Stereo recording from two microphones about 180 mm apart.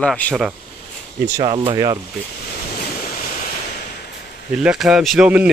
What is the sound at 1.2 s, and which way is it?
Speech, 20° right (ahead or behind).